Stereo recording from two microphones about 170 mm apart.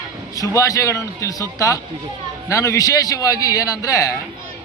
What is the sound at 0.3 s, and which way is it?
A man's voice, 20° left (ahead or behind).